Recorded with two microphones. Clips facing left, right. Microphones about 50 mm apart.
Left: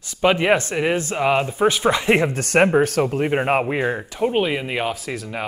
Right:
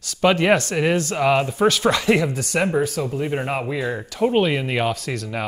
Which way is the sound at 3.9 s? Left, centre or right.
Left.